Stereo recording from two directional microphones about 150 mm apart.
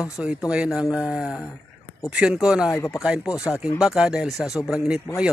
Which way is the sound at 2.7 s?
20° left (ahead or behind).